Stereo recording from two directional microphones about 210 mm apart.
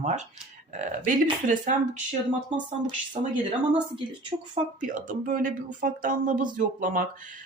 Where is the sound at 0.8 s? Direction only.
40° right (ahead or behind).